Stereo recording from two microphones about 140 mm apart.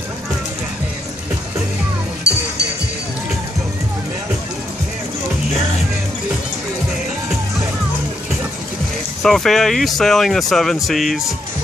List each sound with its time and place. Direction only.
9.2 s speech: 5° left (ahead or behind)